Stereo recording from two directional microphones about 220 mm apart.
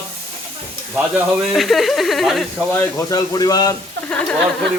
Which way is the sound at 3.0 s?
15° left (ahead or behind).